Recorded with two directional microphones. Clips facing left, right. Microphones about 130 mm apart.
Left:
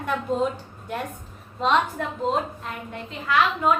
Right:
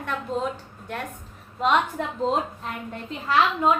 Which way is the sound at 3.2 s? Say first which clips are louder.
Right 1 dB; 30° right (ahead or behind).